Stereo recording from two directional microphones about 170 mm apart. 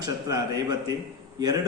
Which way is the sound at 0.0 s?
20° right (ahead or behind).